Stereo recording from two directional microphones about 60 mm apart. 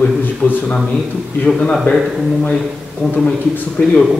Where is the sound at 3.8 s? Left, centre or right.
Left.